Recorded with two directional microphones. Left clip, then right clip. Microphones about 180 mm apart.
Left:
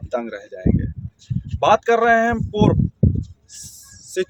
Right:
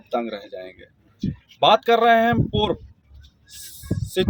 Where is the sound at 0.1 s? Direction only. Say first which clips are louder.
Even; 10° left (ahead or behind).